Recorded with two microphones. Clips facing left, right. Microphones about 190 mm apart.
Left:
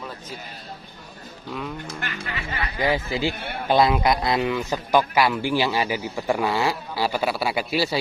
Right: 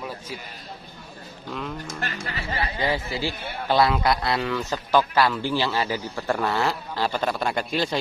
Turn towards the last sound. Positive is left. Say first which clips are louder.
# left 1 dB
turn(degrees=5)  # may be behind; listen again after turning